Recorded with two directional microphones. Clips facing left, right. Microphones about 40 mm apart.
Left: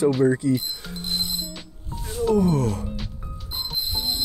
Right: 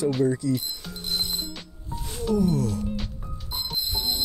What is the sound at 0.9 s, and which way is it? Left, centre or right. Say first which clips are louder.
Music: left 1 dB; left.